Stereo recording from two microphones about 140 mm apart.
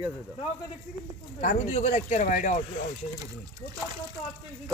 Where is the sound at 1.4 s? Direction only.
60° left (ahead or behind).